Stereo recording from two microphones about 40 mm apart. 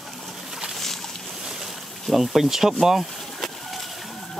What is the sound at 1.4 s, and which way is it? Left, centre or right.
Boat, centre.